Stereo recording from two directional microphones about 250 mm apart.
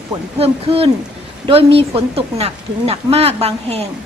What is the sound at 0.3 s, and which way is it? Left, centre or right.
Speech, right.